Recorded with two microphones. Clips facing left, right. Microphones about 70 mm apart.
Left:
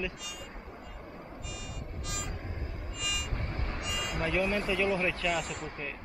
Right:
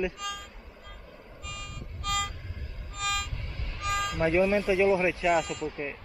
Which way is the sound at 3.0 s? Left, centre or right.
Right.